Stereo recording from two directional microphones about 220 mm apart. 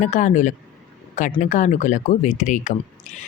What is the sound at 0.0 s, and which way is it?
Speech, 35° left (ahead or behind).